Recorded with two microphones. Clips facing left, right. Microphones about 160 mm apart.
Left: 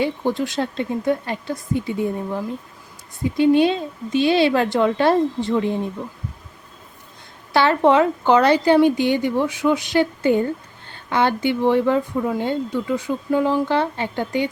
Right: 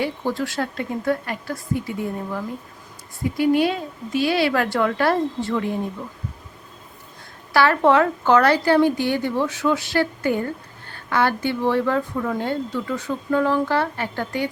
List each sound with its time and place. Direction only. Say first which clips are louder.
0.0 s a woman's voice: left 3 dB; 20° left (ahead or behind)
7.5 s a woman's voice: left 1 dB; 20° left (ahead or behind)